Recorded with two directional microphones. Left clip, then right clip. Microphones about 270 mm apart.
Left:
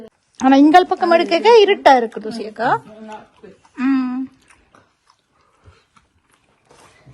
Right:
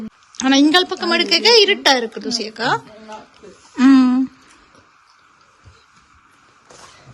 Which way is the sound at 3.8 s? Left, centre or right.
Centre.